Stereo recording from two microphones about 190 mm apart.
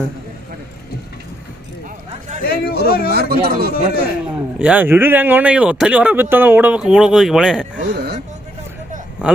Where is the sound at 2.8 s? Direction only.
50° left (ahead or behind).